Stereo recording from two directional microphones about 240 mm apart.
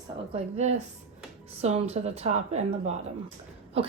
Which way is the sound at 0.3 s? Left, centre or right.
Right.